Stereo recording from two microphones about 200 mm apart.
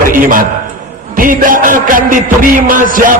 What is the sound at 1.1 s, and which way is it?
Music, 45° right (ahead or behind).